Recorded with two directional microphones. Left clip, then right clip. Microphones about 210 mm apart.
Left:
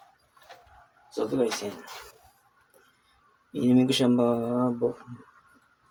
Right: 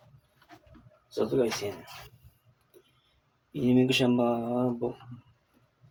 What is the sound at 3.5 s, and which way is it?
Speech, 20° left (ahead or behind).